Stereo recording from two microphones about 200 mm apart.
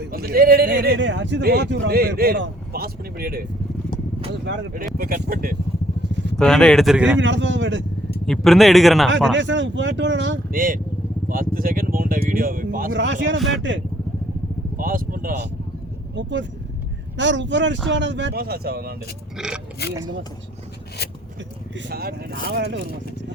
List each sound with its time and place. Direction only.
0.0 s speech: 50° right (ahead or behind)
4.9 s speech: 50° right (ahead or behind)
6.1 s vehicle: 60° right (ahead or behind)
6.3 s speech: 5° left (ahead or behind)
7.2 s speech: 65° right (ahead or behind)
8.3 s speech: centre (ahead or behind)
9.3 s speech: 65° right (ahead or behind)
10.5 s speech: 45° right (ahead or behind)
12.9 s speech: 65° right (ahead or behind)
14.8 s speech: 45° right (ahead or behind)
16.1 s speech: 65° right (ahead or behind)
19.4 s speech: centre (ahead or behind)
19.8 s speech: 55° left (ahead or behind)
21.8 s speech: 55° right (ahead or behind)